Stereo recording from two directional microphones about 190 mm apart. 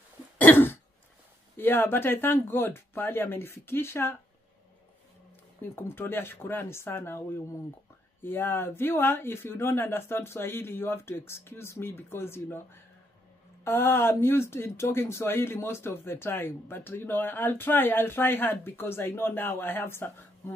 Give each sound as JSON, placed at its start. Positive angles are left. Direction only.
{"t": 0.4, "sound": "cough", "side_deg": 10}
{"t": 1.6, "sound": "speech", "side_deg": 10}
{"t": 5.6, "sound": "speech", "side_deg": 10}
{"t": 13.7, "sound": "speech", "side_deg": 10}